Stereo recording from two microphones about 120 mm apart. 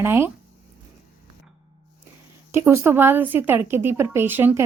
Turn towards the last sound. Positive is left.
turn(degrees=-15)  # may be behind; listen again after turning